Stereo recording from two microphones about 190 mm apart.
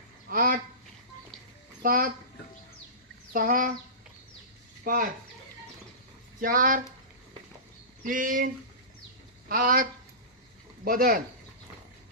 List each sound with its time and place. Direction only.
0.3 s speech: 50° right (ahead or behind)
1.8 s speech: 50° right (ahead or behind)
3.3 s speech: 45° right (ahead or behind)
4.8 s speech: 50° right (ahead or behind)
6.4 s speech: 45° right (ahead or behind)
8.0 s speech: 45° right (ahead or behind)
9.5 s speech: 50° right (ahead or behind)
10.8 s speech: 50° right (ahead or behind)